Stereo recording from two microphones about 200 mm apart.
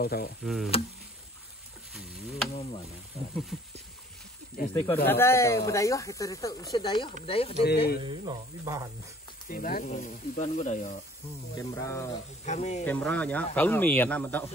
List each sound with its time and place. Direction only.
0.0 s speech: 50° left (ahead or behind)
0.4 s a sound: centre (ahead or behind)
2.0 s a sound: centre (ahead or behind)
3.5 s a sound: centre (ahead or behind)
4.6 s speech: 45° left (ahead or behind)
5.0 s speech: 10° left (ahead or behind); by 7.5 s 30° left (ahead or behind)
7.6 s speech: 50° left (ahead or behind)
8.0 s speech: 20° right (ahead or behind)
9.5 s speech: 45° left (ahead or behind)
11.5 s speech: 15° left (ahead or behind)
12.4 s speech: 35° left (ahead or behind)
12.8 s speech: 5° left (ahead or behind)